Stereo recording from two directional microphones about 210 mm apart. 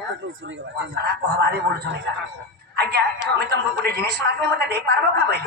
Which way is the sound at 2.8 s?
50° right (ahead or behind).